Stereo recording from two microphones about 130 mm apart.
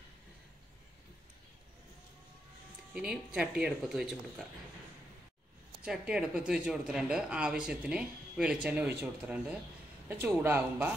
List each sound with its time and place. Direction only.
2.9 s speech: 10° right (ahead or behind)
5.9 s speech: 5° right (ahead or behind)